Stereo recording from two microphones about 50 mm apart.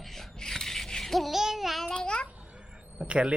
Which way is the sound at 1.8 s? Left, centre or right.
Centre.